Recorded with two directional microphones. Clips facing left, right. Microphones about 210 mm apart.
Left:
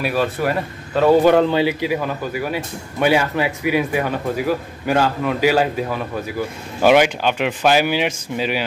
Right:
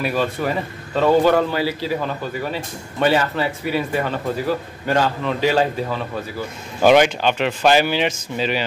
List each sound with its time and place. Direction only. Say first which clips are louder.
0.0 s a man's voice: left 1 dB; 5° left (ahead or behind)